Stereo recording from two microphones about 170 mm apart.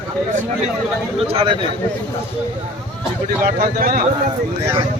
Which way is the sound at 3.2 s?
55° right (ahead or behind).